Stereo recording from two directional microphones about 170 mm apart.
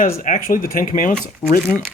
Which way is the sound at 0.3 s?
50° left (ahead or behind).